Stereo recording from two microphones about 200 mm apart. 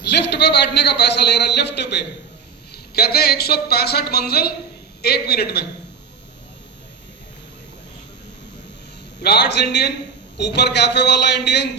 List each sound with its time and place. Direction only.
0.0 s a man's voice: 55° left (ahead or behind)
9.2 s a man's voice: 55° left (ahead or behind)